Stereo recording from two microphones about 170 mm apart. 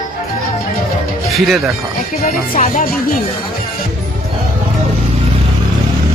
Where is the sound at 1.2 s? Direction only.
Centre (ahead or behind).